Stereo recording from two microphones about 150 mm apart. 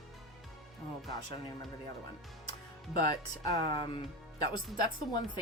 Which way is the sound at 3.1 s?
25° left (ahead or behind).